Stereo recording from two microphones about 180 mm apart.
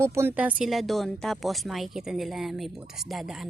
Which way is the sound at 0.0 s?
15° right (ahead or behind).